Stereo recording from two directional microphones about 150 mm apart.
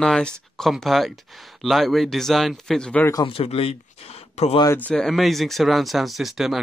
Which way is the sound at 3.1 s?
35° left (ahead or behind).